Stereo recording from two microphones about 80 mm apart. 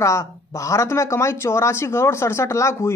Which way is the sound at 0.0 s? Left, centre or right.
Left.